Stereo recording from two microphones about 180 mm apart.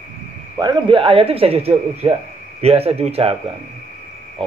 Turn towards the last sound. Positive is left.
turn(degrees=-35)  # may be behind; listen again after turning